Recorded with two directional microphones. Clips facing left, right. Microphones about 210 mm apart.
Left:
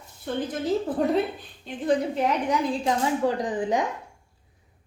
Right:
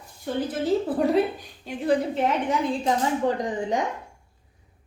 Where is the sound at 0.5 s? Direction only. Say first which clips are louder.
Right 2 dB; 5° right (ahead or behind).